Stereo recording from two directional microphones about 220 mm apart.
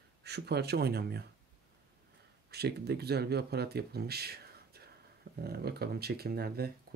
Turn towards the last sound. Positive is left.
turn(degrees=-45)  # may be behind; listen again after turning